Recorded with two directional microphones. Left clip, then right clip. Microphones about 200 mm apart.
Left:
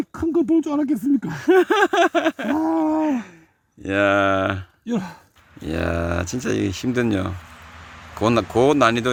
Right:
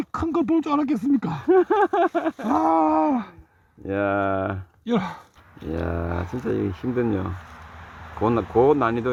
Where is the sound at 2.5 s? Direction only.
10° right (ahead or behind).